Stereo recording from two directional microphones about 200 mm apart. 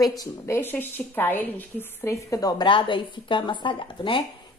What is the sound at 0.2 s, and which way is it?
A woman's voice, 10° left (ahead or behind).